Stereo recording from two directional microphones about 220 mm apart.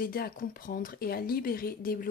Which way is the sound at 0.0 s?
40° left (ahead or behind).